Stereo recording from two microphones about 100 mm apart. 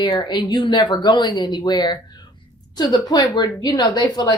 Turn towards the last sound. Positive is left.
turn(degrees=40)  # may be behind; listen again after turning